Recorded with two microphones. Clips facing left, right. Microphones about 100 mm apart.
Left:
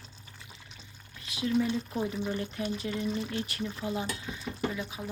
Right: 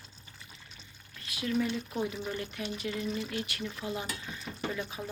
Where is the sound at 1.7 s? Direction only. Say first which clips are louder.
Left 2 dB; 10° left (ahead or behind).